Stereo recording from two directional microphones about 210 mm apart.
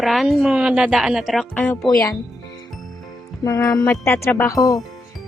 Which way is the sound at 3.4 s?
15° left (ahead or behind).